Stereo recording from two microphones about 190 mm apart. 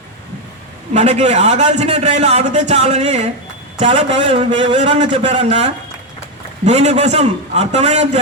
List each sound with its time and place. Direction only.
0.9 s a man's voice: 35° right (ahead or behind)
6.7 s a man's voice: 35° right (ahead or behind)